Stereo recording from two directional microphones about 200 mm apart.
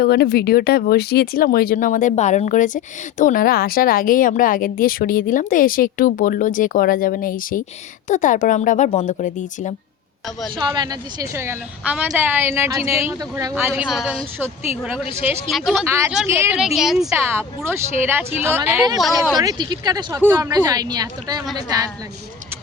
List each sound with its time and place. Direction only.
0.0 s speech: 50° left (ahead or behind)
10.7 s a woman's voice: 20° right (ahead or behind); by 15.9 s centre (ahead or behind)
15.9 s a woman's voice: 15° right (ahead or behind)